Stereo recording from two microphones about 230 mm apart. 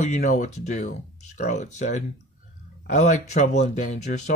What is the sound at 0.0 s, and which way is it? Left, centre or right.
Speech, left.